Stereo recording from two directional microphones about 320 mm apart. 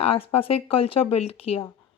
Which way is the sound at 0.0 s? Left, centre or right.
Centre.